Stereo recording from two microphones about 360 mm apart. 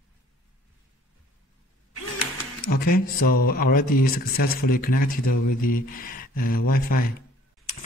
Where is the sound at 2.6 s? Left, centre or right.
Left.